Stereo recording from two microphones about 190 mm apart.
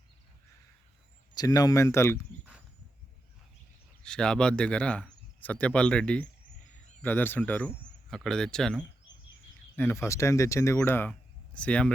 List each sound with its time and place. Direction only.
1.4 s speech: 20° left (ahead or behind)
4.0 s speech: 5° left (ahead or behind)